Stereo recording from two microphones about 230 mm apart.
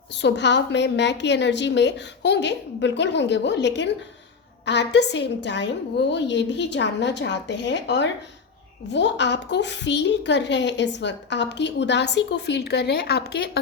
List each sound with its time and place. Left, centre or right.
0.2 s a woman's voice: left